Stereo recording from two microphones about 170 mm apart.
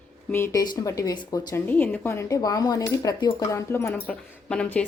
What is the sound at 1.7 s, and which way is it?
Speech, 10° left (ahead or behind).